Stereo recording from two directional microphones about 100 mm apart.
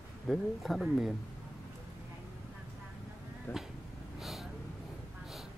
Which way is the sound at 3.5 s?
20° left (ahead or behind).